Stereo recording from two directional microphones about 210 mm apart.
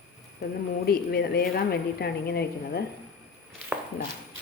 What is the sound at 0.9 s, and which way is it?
A woman's voice, 50° left (ahead or behind).